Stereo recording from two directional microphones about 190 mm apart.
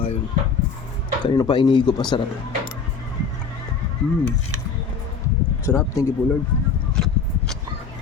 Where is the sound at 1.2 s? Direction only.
25° left (ahead or behind).